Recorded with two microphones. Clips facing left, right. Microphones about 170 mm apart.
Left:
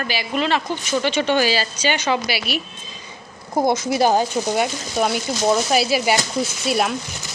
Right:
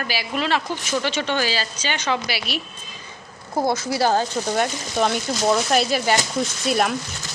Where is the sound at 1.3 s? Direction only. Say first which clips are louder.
Left 5 dB; 10° left (ahead or behind).